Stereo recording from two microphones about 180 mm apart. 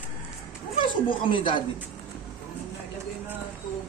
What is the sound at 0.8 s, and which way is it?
Speech, 30° left (ahead or behind).